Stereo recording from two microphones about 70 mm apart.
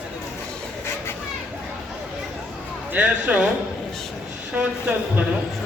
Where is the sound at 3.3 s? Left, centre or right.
Right.